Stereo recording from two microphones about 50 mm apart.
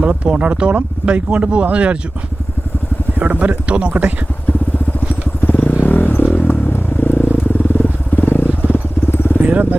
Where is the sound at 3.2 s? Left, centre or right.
Right.